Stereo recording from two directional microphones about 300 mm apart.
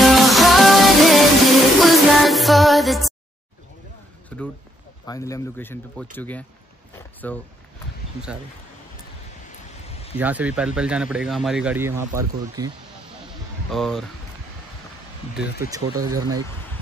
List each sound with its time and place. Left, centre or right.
0.0 s music: centre
4.3 s speech: centre
9.8 s a sound: centre
10.1 s speech: centre
13.7 s speech: centre
15.3 s speech: centre